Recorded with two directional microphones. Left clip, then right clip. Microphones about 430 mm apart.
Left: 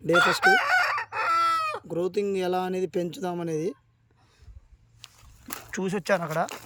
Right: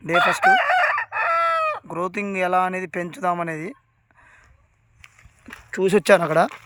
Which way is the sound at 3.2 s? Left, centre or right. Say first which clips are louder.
Right 7 dB; centre.